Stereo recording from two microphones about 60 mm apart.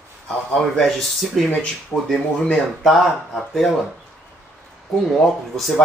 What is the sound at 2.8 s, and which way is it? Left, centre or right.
Speech, centre.